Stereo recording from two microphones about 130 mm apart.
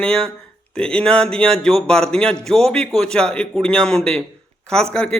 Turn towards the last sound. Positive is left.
turn(degrees=5)  # may be behind; listen again after turning